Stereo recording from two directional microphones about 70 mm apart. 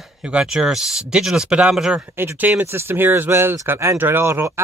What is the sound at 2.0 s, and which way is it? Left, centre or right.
A man's voice, right.